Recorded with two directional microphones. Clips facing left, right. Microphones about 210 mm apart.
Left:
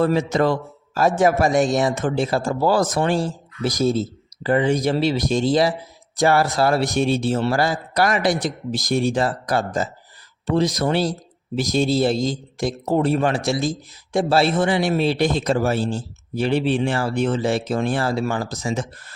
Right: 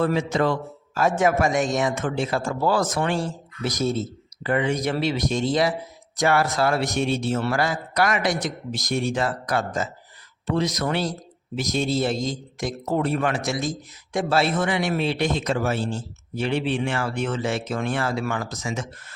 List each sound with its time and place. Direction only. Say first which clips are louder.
0.0 s speech: left 3 dB; 40° left (ahead or behind)